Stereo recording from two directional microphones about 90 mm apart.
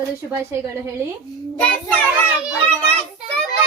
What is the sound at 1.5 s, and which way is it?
Child singing, 15° left (ahead or behind).